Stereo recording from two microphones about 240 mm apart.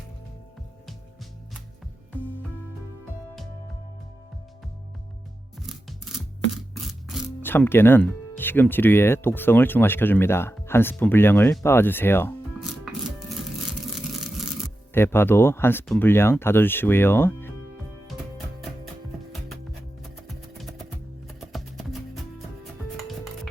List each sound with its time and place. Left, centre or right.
5.5 s music: centre
7.4 s speech: centre
12.5 s music: centre
20.0 s music: centre